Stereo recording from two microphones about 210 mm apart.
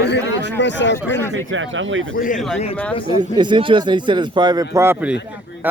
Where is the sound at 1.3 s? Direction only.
65° right (ahead or behind).